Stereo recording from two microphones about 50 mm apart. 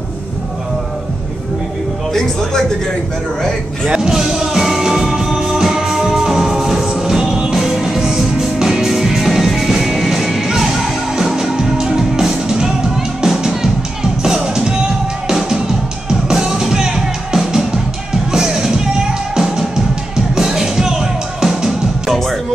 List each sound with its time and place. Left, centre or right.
3.9 s music: centre